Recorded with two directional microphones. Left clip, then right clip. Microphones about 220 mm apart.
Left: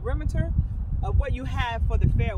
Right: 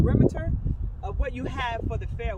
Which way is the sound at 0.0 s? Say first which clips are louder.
Right 8 dB; 15° left (ahead or behind).